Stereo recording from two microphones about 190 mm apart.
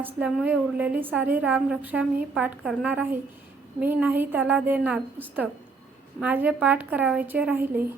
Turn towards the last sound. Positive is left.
turn(degrees=-10)  # may be behind; listen again after turning